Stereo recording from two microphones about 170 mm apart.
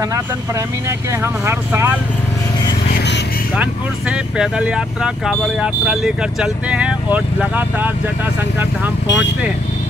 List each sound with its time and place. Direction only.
0.8 s speech: 15° right (ahead or behind)
4.4 s speech: 5° right (ahead or behind)
9.0 s speech: 90° left